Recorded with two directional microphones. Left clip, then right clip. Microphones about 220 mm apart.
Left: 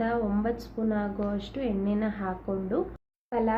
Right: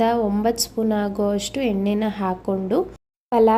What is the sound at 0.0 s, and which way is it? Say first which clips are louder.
A woman's voice: right 9 dB; 35° right (ahead or behind).